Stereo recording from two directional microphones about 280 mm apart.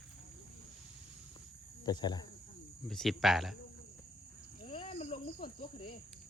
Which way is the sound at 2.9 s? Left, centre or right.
Centre.